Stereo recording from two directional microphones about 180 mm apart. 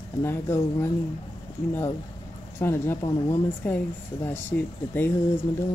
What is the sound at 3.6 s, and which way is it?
Speech, 10° left (ahead or behind).